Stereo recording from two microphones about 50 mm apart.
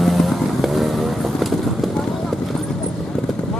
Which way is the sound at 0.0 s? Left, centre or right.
Centre.